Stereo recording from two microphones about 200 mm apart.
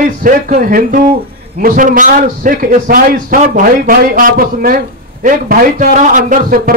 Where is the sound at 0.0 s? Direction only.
40° right (ahead or behind).